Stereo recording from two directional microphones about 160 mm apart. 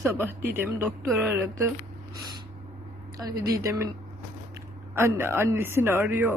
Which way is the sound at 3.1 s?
25° right (ahead or behind).